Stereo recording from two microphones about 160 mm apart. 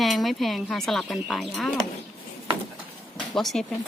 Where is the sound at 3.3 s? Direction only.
Centre (ahead or behind).